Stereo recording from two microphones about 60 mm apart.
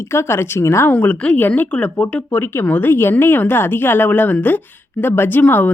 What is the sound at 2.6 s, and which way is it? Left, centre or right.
Speech, left.